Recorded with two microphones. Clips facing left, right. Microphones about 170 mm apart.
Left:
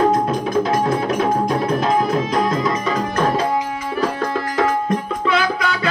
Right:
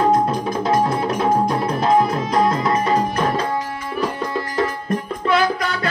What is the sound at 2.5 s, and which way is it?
Music, 90° left.